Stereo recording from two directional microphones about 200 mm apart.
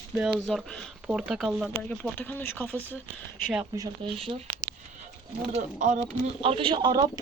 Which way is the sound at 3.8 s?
25° right (ahead or behind).